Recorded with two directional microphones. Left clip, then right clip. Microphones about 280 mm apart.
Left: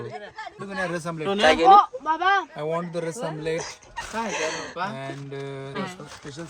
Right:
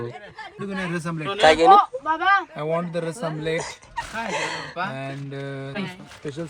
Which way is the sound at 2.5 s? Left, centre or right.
Centre.